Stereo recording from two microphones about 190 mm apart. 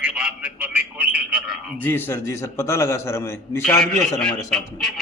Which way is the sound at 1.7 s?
10° left (ahead or behind).